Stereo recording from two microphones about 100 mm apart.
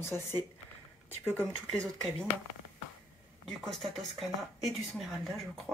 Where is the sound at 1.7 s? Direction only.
5° left (ahead or behind).